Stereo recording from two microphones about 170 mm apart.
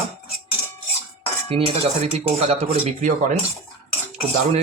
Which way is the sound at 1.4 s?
35° right (ahead or behind).